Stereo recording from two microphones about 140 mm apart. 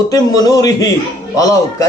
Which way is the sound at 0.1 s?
25° left (ahead or behind).